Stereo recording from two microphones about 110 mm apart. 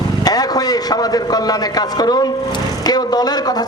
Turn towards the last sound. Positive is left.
turn(degrees=35)  # may be behind; listen again after turning